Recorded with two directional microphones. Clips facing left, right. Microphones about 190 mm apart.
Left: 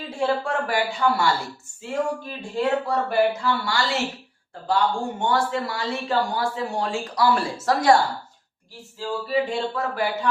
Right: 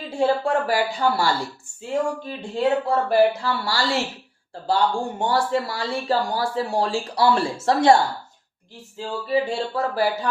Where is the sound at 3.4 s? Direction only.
35° right (ahead or behind).